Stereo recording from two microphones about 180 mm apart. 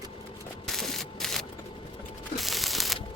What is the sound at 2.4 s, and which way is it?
Mechanisms, centre (ahead or behind).